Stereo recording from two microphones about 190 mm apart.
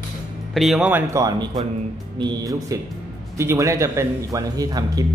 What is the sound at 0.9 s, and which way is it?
Speech, 15° right (ahead or behind).